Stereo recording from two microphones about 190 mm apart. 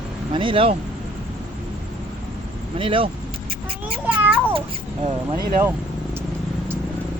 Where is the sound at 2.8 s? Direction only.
25° right (ahead or behind).